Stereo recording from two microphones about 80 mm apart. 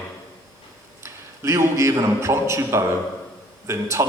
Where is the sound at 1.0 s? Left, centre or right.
Right.